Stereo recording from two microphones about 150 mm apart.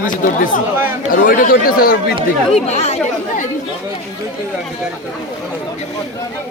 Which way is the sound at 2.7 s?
45° left (ahead or behind).